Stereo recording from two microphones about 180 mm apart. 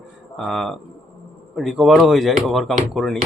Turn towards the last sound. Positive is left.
turn(degrees=0)  # may be behind; listen again after turning